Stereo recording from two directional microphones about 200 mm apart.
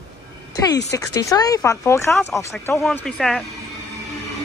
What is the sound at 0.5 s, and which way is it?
Speech, 20° left (ahead or behind).